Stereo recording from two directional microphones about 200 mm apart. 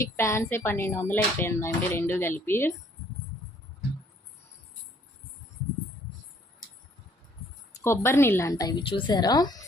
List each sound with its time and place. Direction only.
0.0 s speech: 15° left (ahead or behind)
7.9 s a woman's voice: 10° left (ahead or behind)